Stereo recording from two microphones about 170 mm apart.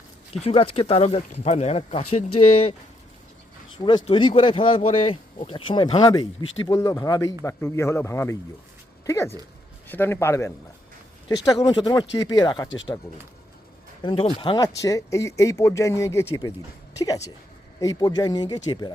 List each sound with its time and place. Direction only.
0.4 s speech: 35° left (ahead or behind)
3.8 s speech: 30° left (ahead or behind)
11.6 s speech: 25° left (ahead or behind)
12.6 s speech: 90° left
14.0 s speech: 30° left (ahead or behind)